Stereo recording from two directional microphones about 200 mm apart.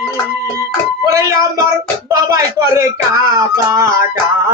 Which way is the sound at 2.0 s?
15° right (ahead or behind).